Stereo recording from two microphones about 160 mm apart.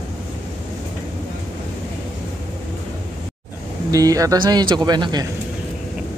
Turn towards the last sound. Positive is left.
turn(degrees=-25)  # may be behind; listen again after turning